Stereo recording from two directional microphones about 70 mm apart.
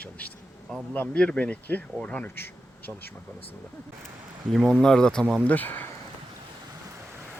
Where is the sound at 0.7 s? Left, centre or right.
Centre.